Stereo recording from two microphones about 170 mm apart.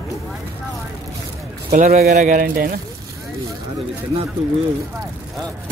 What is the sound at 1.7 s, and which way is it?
Speech, 40° right (ahead or behind).